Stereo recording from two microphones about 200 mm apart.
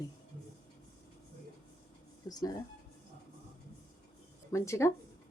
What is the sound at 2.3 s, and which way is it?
Speech, 20° left (ahead or behind).